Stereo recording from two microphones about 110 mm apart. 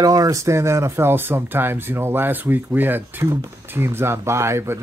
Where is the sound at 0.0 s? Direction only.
35° right (ahead or behind).